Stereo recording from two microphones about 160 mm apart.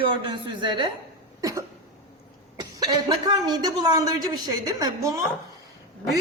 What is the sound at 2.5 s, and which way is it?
A woman's voice, 25° right (ahead or behind).